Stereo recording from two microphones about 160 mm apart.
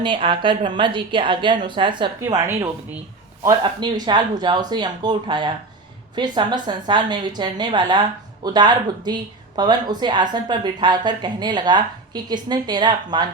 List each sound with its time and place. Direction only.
0.0 s a woman's voice: 30° right (ahead or behind)
2.2 s speech: 20° right (ahead or behind)